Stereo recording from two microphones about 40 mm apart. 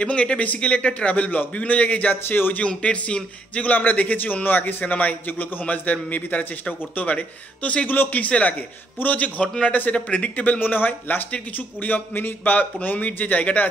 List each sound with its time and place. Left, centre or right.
0.0 s a man's voice: left
2.2 s speech: left
2.5 s speech: left
3.6 s a man's voice: left
4.8 s a man's voice: left
10.6 s a man's voice: left